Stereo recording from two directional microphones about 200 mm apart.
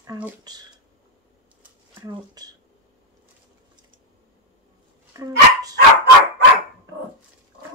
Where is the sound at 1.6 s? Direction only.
15° right (ahead or behind).